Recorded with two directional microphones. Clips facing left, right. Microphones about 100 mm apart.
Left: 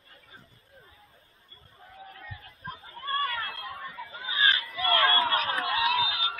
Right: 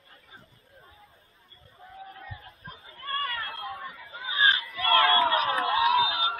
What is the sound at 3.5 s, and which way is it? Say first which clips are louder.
Chatter: right 2 dB; 15° right (ahead or behind).